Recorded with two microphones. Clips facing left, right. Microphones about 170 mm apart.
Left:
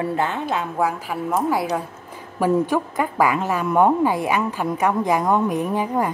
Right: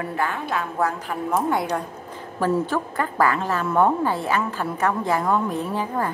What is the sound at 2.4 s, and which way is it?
A woman's voice, 15° left (ahead or behind).